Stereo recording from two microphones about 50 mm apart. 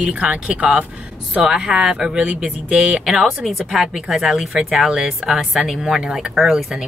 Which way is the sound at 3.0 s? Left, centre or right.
Centre.